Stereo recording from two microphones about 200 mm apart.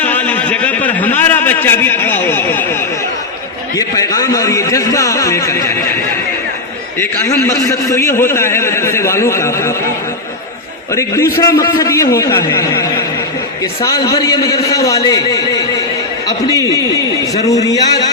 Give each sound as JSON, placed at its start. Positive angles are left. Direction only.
{"t": 0.0, "sound": "a sound", "side_deg": 10}
{"t": 3.8, "sound": "a man's voice", "side_deg": 15}
{"t": 7.0, "sound": "a man's voice", "side_deg": 10}
{"t": 10.9, "sound": "a man's voice", "side_deg": 15}
{"t": 13.8, "sound": "a man's voice", "side_deg": 20}